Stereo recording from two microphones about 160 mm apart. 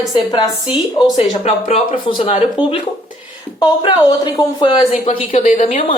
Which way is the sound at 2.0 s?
30° left (ahead or behind).